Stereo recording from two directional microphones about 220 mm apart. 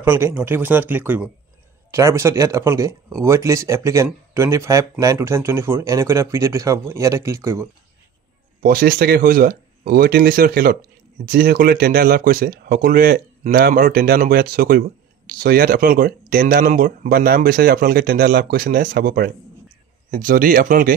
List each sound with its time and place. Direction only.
0.0 s speech: 10° right (ahead or behind)
8.6 s speech: 45° right (ahead or behind)